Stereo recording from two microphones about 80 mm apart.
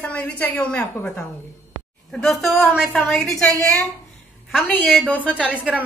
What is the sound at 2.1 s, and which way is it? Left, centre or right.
Speech, centre.